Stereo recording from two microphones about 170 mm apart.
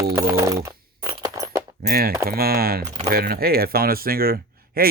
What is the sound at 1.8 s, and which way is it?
Speech, 60° right (ahead or behind).